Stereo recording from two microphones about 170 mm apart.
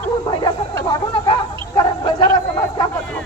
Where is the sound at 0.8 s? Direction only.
25° left (ahead or behind).